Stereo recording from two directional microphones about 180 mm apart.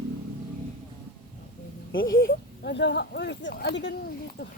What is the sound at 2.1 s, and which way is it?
Speech, 60° left (ahead or behind).